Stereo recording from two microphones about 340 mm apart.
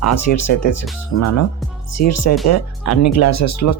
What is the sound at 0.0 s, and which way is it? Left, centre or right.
Speech, left.